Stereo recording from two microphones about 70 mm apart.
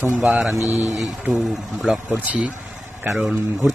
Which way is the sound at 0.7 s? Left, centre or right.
Left.